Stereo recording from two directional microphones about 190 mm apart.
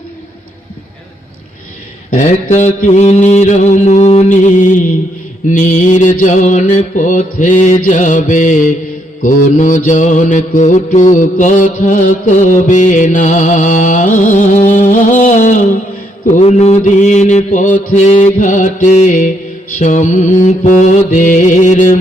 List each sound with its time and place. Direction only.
2.0 s mantra: 40° left (ahead or behind)